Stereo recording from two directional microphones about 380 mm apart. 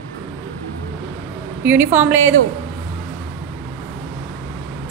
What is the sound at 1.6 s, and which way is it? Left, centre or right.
Speech, centre.